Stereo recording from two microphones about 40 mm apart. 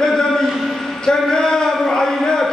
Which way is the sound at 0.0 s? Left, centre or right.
Centre.